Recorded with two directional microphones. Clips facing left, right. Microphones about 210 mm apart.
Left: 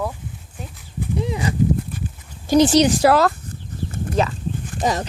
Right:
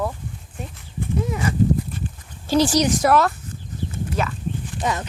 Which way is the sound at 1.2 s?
15° left (ahead or behind).